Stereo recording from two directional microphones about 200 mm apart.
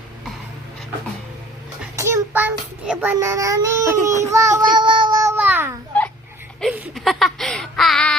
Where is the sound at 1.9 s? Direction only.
15° right (ahead or behind).